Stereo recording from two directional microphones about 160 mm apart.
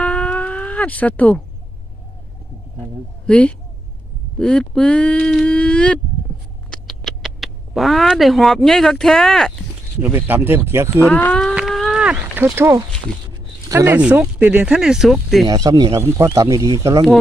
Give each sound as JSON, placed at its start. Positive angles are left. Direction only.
{"t": 0.0, "sound": "a sound", "side_deg": 10}
{"t": 3.3, "sound": "speech", "side_deg": 10}
{"t": 4.4, "sound": "a sound", "side_deg": 5}
{"t": 6.7, "sound": "speech", "side_deg": 0}
{"t": 10.0, "sound": "speech", "side_deg": -15}
{"t": 11.1, "sound": "speech", "side_deg": 10}
{"t": 11.5, "sound": "livestock", "side_deg": 0}
{"t": 13.7, "sound": "speech", "side_deg": -15}
{"t": 15.4, "sound": "speech", "side_deg": -25}